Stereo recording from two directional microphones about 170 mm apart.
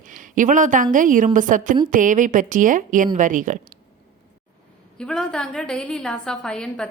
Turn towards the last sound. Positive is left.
turn(degrees=5)  # may be behind; listen again after turning